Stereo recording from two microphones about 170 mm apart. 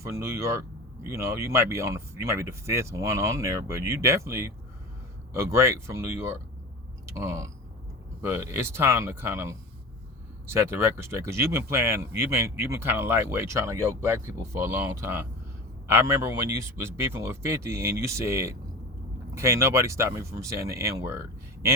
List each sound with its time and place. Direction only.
0.0 s speech: 15° right (ahead or behind)